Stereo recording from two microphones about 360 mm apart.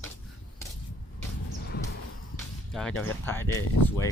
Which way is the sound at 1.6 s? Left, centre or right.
Left.